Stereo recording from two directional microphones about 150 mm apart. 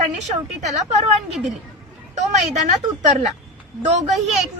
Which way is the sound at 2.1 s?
50° right (ahead or behind).